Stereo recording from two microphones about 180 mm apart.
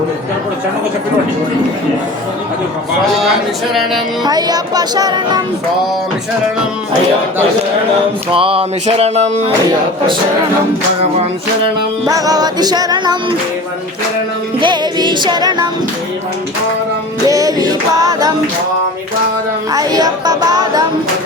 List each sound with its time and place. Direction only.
4.2 s music: 20° right (ahead or behind)
8.3 s a sound: 30° right (ahead or behind)
12.0 s music: 20° right (ahead or behind)
14.6 s music: 25° right (ahead or behind)
17.2 s music: 20° right (ahead or behind)
19.7 s music: 20° right (ahead or behind)